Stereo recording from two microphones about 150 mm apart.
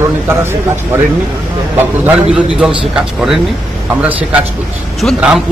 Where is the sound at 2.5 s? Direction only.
Centre (ahead or behind).